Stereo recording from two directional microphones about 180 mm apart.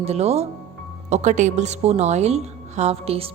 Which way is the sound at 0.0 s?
35° right (ahead or behind).